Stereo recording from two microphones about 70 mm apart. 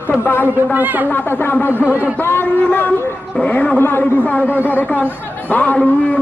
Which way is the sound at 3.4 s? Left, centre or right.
Centre.